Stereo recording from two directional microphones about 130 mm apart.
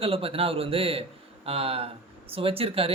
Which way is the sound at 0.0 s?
45° right (ahead or behind).